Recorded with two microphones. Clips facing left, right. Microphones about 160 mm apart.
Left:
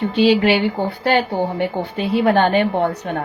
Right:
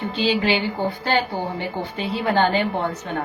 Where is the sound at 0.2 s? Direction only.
65° left (ahead or behind).